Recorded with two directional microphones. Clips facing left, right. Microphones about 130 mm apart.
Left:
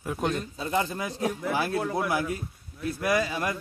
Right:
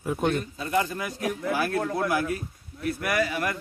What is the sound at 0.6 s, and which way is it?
A man's voice, 25° left (ahead or behind).